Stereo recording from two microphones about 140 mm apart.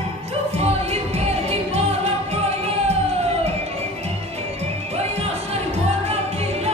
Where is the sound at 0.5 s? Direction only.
45° right (ahead or behind).